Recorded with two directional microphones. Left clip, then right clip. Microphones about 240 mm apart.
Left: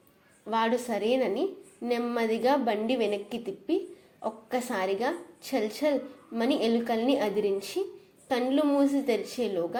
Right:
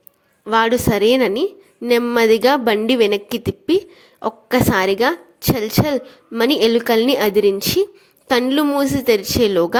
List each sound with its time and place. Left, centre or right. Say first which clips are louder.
0.4 s a woman's voice: right 12 dB; right